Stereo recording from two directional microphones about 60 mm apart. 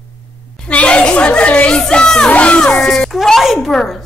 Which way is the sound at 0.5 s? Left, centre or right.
Centre.